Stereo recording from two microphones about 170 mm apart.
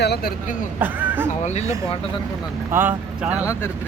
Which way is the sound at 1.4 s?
40° left (ahead or behind).